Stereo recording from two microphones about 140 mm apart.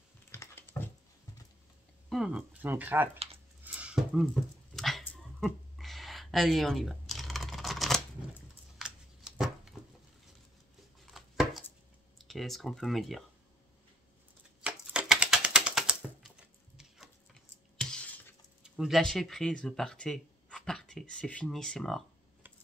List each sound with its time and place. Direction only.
0.3 s a sound: 15° left (ahead or behind)
2.0 s speech: 5° right (ahead or behind)
3.6 s dog: 10° right (ahead or behind)
5.1 s a sound: centre (ahead or behind)
11.1 s chopping: centre (ahead or behind)
12.2 s speech: centre (ahead or behind)
14.6 s typewriter: 5° right (ahead or behind); by 18.2 s 10° left (ahead or behind)
18.6 s speech: centre (ahead or behind)